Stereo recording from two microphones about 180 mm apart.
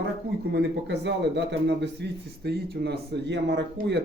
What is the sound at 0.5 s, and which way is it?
A man's voice, 75° right (ahead or behind).